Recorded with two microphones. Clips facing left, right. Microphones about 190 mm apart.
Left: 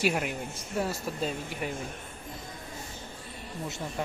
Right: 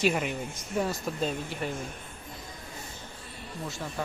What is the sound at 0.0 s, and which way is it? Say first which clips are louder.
Speech: right 1 dB; 5° left (ahead or behind).